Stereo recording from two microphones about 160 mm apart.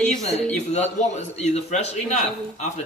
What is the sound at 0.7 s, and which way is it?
A man's voice, 45° left (ahead or behind).